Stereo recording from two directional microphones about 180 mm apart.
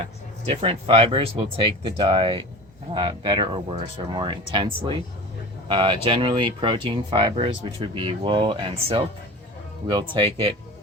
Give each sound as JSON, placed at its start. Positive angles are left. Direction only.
{"t": 0.0, "sound": "speech", "side_deg": -30}